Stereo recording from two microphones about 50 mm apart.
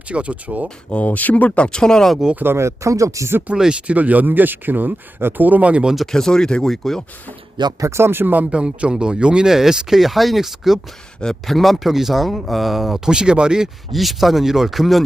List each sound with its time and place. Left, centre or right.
0.1 s speech: right
0.9 s speech: left; by 2.1 s centre
2.3 s speech: right
2.6 s speech: right
3.8 s speech: right
6.0 s speech: centre
7.8 s speech: right
8.4 s speech: centre
11.2 s speech: centre
13.1 s speech: centre
13.9 s speech: centre